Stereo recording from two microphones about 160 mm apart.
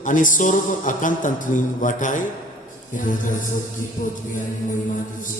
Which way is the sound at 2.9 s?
55° left (ahead or behind).